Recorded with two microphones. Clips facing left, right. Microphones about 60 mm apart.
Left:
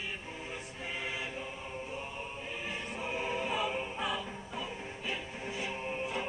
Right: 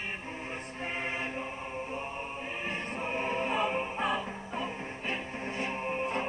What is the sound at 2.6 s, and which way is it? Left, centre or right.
Music, right.